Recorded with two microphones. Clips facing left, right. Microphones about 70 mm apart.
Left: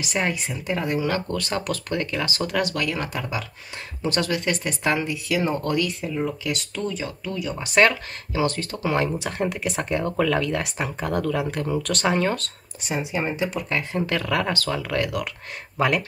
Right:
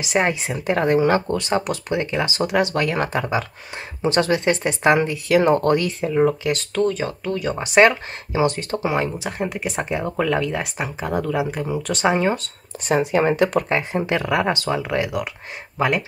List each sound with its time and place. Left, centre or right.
0.0 s speech: right
0.7 s speech: right
1.3 s speech: right
6.9 s speech: right
7.6 s speech: right
8.9 s speech: centre
12.7 s speech: right
13.7 s speech: right
15.0 s speech: centre